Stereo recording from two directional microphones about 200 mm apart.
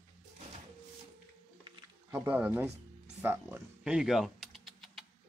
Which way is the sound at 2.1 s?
10° right (ahead or behind).